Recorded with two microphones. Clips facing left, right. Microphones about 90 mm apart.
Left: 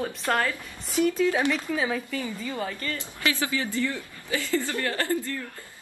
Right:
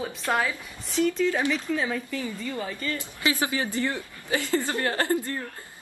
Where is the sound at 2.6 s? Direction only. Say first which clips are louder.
Right 1 dB; 10° right (ahead or behind).